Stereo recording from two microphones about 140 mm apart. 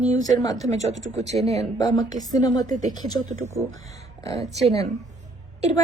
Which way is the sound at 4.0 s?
25° left (ahead or behind).